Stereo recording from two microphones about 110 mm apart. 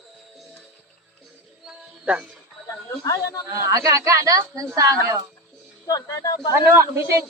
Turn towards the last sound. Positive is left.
turn(degrees=-25)  # may be behind; listen again after turning